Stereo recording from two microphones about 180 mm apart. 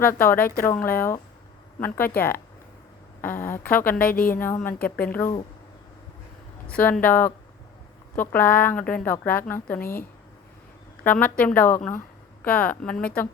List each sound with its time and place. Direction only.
0.0 s speech: 10° left (ahead or behind)
3.9 s a woman's voice: 50° left (ahead or behind)
4.4 s speech: 10° left (ahead or behind)
6.7 s speech: 5° left (ahead or behind)
11.0 s speech: 10° left (ahead or behind)